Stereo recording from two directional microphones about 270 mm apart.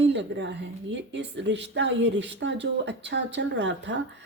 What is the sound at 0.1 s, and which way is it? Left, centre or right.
A woman's voice, right.